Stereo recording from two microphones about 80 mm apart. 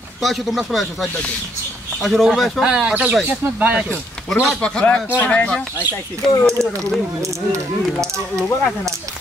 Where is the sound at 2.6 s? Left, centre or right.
Centre.